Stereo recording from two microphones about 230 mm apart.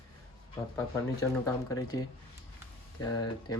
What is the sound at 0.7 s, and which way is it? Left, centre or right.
Speech, centre.